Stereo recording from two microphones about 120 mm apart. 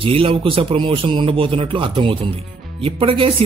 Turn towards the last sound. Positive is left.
turn(degrees=-50)  # may be behind; listen again after turning